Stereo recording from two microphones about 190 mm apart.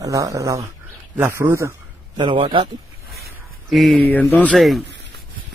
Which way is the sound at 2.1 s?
25° right (ahead or behind).